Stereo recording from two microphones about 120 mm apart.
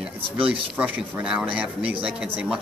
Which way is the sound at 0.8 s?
10° right (ahead or behind).